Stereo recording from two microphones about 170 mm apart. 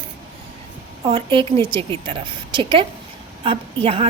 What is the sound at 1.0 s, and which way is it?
A woman's voice, 30° right (ahead or behind).